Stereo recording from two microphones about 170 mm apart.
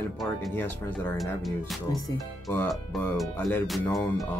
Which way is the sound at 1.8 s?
20° left (ahead or behind).